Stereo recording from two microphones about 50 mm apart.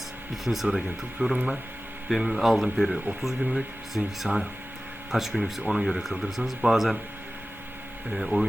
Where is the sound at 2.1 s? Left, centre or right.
Centre.